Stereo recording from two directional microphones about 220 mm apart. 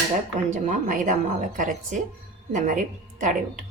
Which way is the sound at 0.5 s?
35° right (ahead or behind).